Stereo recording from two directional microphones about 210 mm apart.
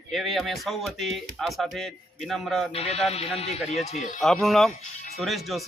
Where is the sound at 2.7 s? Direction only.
30° left (ahead or behind).